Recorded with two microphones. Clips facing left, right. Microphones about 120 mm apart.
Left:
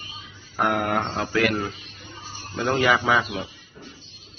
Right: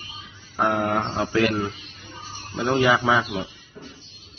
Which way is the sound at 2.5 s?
20° right (ahead or behind).